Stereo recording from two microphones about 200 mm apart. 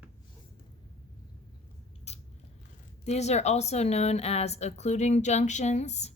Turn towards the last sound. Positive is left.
turn(degrees=35)  # may be behind; listen again after turning